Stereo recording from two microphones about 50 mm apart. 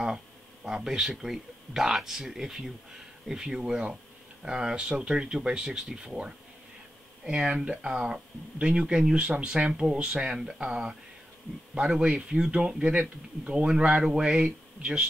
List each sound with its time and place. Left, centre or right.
0.7 s speech: centre
14.4 s speech: right